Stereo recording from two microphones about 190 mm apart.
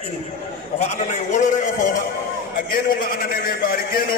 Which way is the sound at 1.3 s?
40° left (ahead or behind).